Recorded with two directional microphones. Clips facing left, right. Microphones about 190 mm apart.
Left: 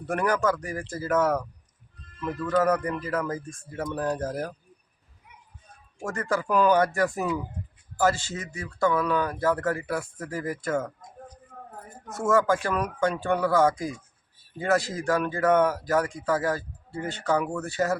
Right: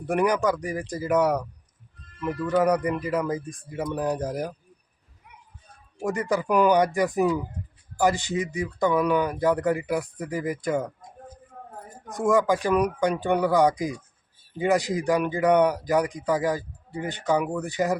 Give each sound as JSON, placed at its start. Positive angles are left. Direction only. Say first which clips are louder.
{"t": 0.0, "sound": "speech", "louder": "right 2 dB", "side_deg": -15}
{"t": 2.5, "sound": "speech", "louder": "right 2 dB", "side_deg": -15}
{"t": 6.1, "sound": "speech", "louder": "right 3 dB", "side_deg": -15}
{"t": 12.0, "sound": "speech", "louder": "right 1 dB", "side_deg": -15}